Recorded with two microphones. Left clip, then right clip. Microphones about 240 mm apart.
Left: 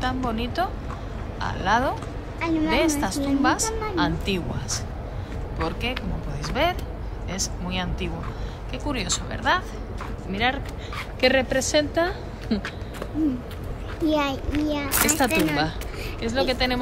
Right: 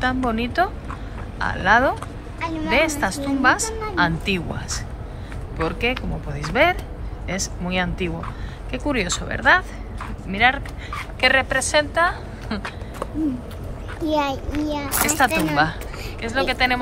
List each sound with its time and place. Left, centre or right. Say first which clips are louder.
0.0 s a woman's voice: right 5 dB; centre
2.4 s a woman's voice: left 2 dB; right
2.8 s a woman's voice: right 2 dB; centre
14.0 s a child's voice: right 2 dB; centre
16.2 s a woman's voice: right 3 dB; centre